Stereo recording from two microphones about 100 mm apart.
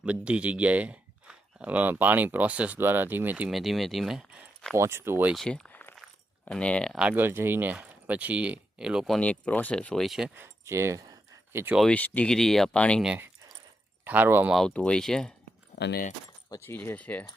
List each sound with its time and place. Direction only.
0.0 s speech: 10° right (ahead or behind)
3.5 s speech: centre (ahead or behind)
4.7 s speech: 25° right (ahead or behind)
5.3 s speech: 5° left (ahead or behind)
6.9 s speech: 10° right (ahead or behind)
7.2 s speech: 25° right (ahead or behind); by 9.2 s centre (ahead or behind)
9.2 s speech: 15° left (ahead or behind); by 10.3 s 5° right (ahead or behind)
10.3 s a sound: 25° right (ahead or behind)
11.9 s speech: 15° left (ahead or behind)
14.0 s speech: 20° right (ahead or behind)
14.7 s speech: 10° left (ahead or behind)
16.6 s speech: 20° left (ahead or behind)